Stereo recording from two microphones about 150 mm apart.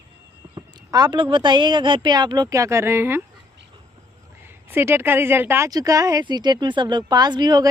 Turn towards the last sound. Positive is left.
turn(degrees=-25)  # may be behind; listen again after turning